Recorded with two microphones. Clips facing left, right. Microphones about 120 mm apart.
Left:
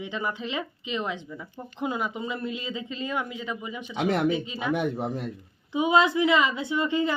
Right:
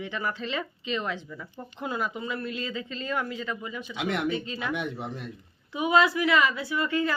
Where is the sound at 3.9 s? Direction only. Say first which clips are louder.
Left 5 dB; 40° left (ahead or behind).